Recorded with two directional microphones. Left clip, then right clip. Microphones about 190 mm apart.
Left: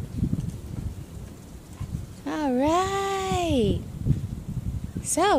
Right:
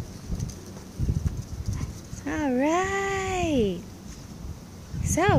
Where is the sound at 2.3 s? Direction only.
15° left (ahead or behind).